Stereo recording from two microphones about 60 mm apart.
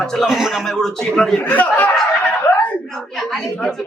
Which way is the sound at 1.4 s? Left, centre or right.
Left.